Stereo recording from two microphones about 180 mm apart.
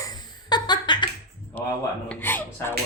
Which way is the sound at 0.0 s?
20° left (ahead or behind).